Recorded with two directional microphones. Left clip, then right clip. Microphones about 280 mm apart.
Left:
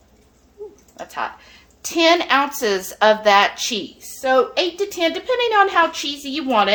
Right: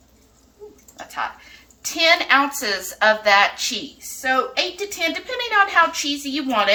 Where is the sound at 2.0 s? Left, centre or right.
Left.